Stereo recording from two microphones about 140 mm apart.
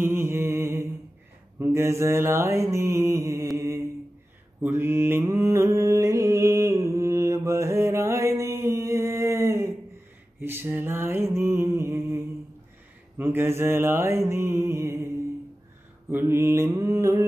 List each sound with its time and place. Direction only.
0.0 s mantra: 15° right (ahead or behind)
13.2 s mantra: 15° right (ahead or behind)
16.1 s mantra: 15° right (ahead or behind)